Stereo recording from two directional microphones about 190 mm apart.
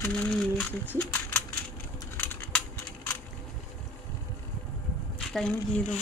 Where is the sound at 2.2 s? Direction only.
10° left (ahead or behind).